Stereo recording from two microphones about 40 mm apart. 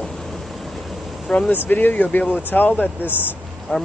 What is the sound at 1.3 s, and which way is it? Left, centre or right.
Speech, centre.